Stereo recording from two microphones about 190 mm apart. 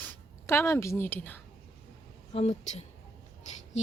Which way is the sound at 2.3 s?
35° left (ahead or behind).